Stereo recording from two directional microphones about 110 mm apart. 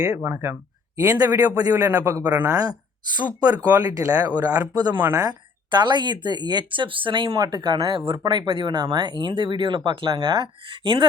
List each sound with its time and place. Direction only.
0.0 s speech: 15° right (ahead or behind)
1.2 s speech: 35° right (ahead or behind)
2.2 s speech: 15° right (ahead or behind)
2.5 s speech: 35° right (ahead or behind); by 7.3 s 50° right (ahead or behind)
7.3 s speech: 35° right (ahead or behind)